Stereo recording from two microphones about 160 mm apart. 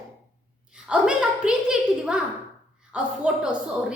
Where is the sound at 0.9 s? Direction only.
5° right (ahead or behind).